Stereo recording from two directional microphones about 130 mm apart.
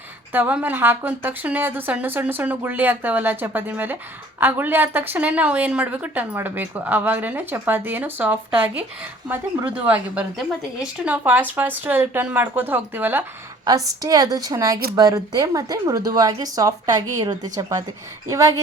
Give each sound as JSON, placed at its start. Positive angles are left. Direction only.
{"t": 0.3, "sound": "a woman's voice", "side_deg": -15}
{"t": 13.7, "sound": "a woman's voice", "side_deg": -25}